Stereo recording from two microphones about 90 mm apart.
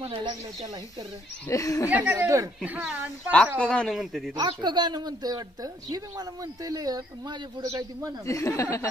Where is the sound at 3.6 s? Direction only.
10° left (ahead or behind).